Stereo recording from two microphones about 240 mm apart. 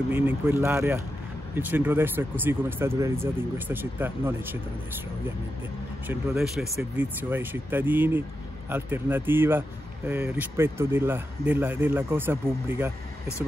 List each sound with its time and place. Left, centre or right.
0.1 s speech: centre
6.0 s speech: centre